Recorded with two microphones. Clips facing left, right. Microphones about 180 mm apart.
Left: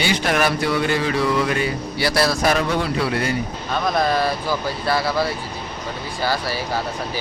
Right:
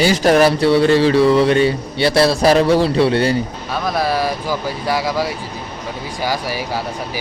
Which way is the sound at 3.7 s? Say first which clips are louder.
Even; 5° right (ahead or behind).